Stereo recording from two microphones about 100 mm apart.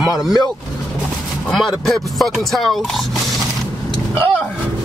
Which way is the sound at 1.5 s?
Centre (ahead or behind).